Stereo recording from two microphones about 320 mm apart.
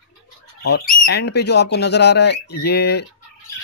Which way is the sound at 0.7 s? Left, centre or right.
Left.